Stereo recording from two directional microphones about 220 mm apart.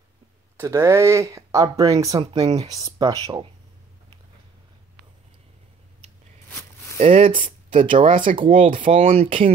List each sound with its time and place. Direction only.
0.6 s speech: 10° right (ahead or behind)
7.0 s speech: 25° right (ahead or behind)
8.1 s speech: 35° right (ahead or behind)
8.4 s speech: 25° right (ahead or behind)